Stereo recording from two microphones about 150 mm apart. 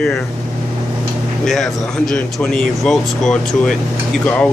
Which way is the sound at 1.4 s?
5° left (ahead or behind).